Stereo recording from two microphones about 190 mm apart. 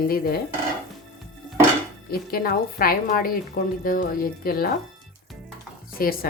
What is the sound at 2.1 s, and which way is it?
A woman's voice, 50° left (ahead or behind).